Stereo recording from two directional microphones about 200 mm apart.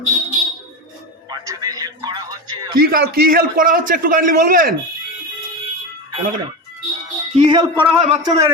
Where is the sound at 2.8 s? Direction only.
50° right (ahead or behind).